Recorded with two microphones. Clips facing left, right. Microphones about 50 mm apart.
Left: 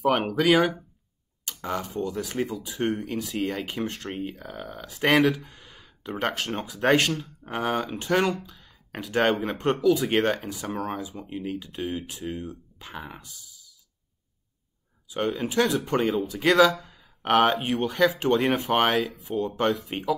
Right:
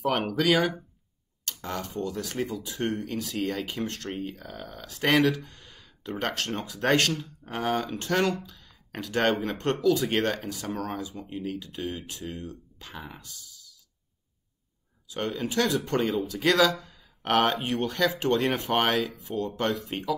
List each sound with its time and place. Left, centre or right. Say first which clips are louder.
0.0 s speech: left 3 dB; centre
1.4 s tick: left 3 dB; centre
2.1 s speech: left 2 dB; centre
8.0 s speech: left 4 dB; centre
15.2 s speech: left 3 dB; centre
16.7 s a sound: left 1 dB; centre
17.6 s speech: left 3 dB; centre